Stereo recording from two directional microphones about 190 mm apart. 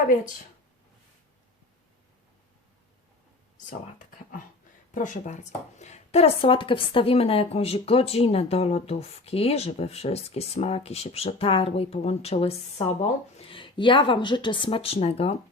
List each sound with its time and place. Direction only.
3.7 s speech: 45° left (ahead or behind)